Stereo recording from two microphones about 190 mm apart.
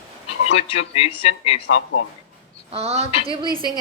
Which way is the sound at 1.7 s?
90° left.